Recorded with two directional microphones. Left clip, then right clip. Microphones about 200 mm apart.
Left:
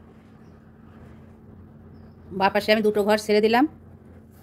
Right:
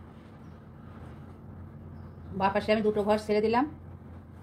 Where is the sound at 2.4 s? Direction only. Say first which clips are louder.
Left 6 dB; 65° left (ahead or behind).